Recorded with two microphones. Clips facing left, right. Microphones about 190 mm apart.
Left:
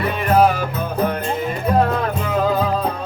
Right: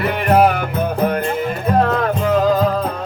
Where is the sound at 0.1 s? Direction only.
65° right (ahead or behind).